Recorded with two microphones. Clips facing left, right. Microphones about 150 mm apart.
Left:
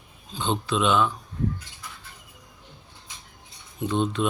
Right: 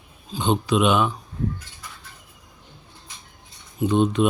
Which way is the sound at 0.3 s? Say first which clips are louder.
Right 5 dB; 15° right (ahead or behind).